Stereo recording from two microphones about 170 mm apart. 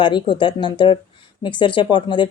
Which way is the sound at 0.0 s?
30° left (ahead or behind).